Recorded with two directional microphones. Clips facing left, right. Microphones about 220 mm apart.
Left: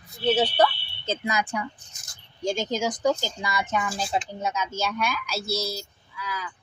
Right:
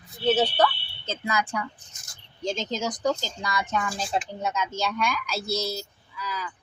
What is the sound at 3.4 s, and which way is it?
Speech, 5° left (ahead or behind).